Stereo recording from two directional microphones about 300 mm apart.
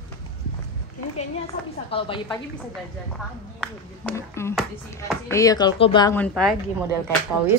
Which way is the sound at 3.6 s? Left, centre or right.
Centre.